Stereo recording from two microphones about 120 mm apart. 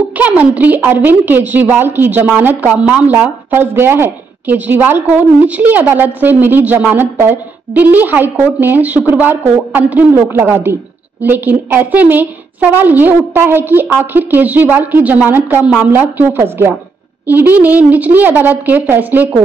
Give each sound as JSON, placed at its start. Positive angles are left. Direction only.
{"t": 0.2, "sound": "a woman's voice", "side_deg": -15}